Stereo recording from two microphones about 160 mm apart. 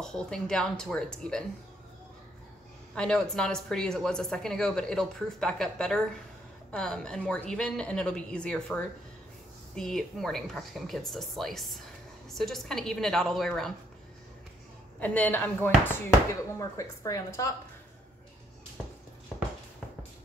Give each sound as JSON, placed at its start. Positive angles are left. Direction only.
{"t": 0.0, "sound": "speech", "side_deg": 5}
{"t": 2.9, "sound": "speech", "side_deg": 5}
{"t": 15.0, "sound": "a woman's voice", "side_deg": 10}